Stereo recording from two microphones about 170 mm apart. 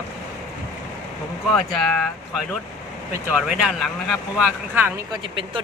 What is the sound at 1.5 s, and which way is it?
Speech, centre (ahead or behind).